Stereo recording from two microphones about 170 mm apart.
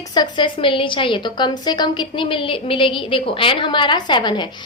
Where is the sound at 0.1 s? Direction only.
25° left (ahead or behind).